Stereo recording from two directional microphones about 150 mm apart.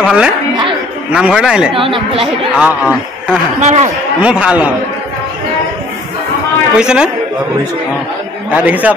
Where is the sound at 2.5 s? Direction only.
5° right (ahead or behind).